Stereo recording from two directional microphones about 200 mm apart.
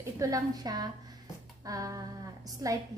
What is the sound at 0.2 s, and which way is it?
Speech, 20° right (ahead or behind).